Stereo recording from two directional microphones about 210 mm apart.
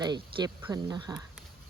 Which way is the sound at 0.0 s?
20° right (ahead or behind).